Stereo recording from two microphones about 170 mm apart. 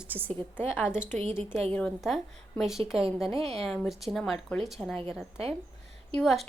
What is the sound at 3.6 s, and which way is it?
Speech, centre (ahead or behind).